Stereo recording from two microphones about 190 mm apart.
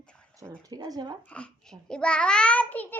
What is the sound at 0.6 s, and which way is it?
Speech, 20° right (ahead or behind).